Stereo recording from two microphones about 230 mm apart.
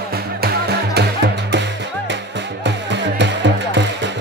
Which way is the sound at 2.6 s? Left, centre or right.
Right.